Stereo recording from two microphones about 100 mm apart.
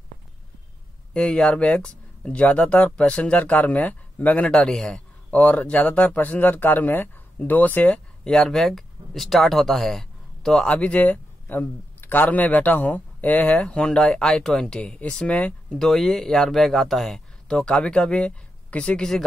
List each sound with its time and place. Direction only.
1.1 s speech: 5° left (ahead or behind)